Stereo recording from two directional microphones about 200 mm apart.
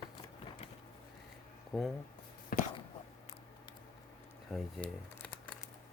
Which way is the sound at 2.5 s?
45° left (ahead or behind).